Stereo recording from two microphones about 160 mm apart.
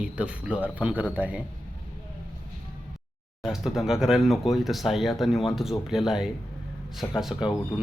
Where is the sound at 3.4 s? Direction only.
Centre (ahead or behind).